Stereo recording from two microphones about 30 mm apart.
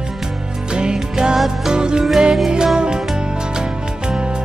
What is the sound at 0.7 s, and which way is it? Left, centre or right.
Music, right.